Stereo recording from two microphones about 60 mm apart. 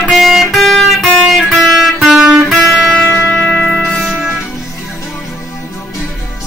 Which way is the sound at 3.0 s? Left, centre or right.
Left.